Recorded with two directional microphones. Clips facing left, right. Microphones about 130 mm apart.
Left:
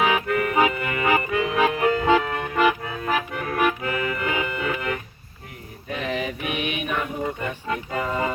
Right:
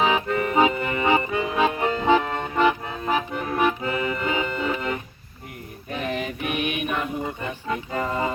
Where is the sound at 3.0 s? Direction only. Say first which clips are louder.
Right 2 dB; 25° right (ahead or behind).